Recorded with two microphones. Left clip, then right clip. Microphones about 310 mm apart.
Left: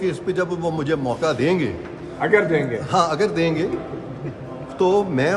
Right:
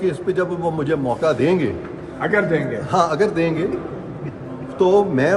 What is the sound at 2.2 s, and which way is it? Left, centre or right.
Speech, left.